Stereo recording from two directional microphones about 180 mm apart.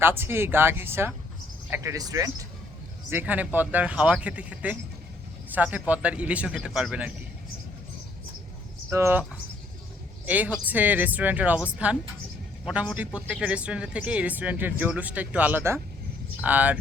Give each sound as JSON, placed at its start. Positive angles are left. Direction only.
{"t": 0.0, "sound": "speech", "side_deg": -10}
{"t": 8.9, "sound": "speech", "side_deg": -15}
{"t": 10.2, "sound": "speech", "side_deg": -10}